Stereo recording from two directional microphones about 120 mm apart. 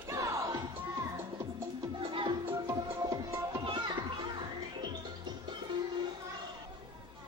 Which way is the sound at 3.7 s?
45° right (ahead or behind).